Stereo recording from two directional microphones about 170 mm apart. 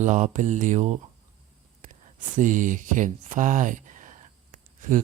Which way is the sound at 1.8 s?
45° right (ahead or behind).